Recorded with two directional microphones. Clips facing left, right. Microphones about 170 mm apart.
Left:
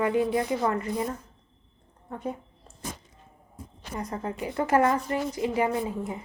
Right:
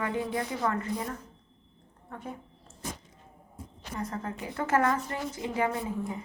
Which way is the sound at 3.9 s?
20° left (ahead or behind).